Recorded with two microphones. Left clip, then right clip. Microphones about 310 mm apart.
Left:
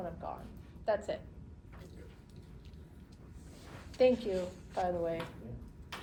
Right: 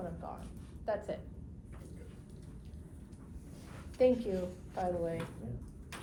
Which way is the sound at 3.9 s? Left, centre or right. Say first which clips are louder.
Left 1 dB; left.